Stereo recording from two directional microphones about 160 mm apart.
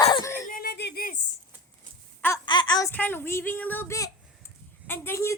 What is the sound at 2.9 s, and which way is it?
A woman's voice, 10° left (ahead or behind).